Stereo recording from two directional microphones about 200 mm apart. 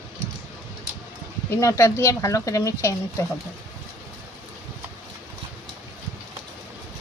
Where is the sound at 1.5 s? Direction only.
15° left (ahead or behind).